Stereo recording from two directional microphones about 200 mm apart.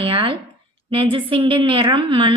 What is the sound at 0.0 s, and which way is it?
A woman's voice, 25° right (ahead or behind).